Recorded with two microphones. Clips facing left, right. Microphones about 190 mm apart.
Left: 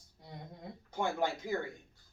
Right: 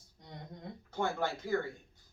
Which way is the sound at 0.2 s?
5° left (ahead or behind).